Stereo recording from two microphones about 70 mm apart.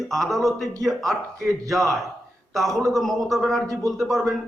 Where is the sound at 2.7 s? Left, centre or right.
Right.